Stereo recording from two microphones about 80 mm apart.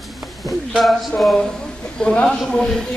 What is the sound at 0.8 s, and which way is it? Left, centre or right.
Speech, centre.